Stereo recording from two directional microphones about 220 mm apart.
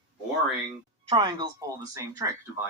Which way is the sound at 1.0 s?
20° right (ahead or behind).